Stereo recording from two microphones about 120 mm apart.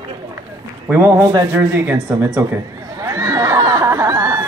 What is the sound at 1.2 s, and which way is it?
Speech, 30° right (ahead or behind).